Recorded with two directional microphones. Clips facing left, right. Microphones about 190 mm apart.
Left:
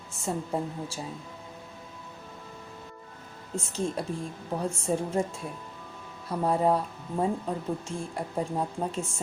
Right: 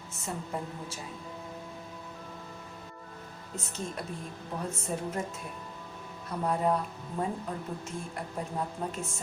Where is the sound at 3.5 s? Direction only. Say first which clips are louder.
Left 7 dB; 30° left (ahead or behind).